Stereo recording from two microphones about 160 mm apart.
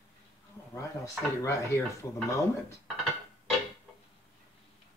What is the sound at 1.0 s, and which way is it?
Speech, 20° left (ahead or behind).